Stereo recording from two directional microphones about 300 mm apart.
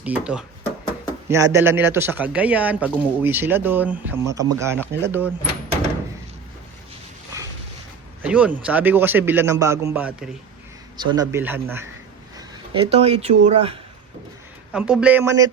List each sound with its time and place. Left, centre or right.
0.0 s a man's voice: centre
8.2 s a man's voice: centre
12.4 s speech: centre
14.7 s speech: centre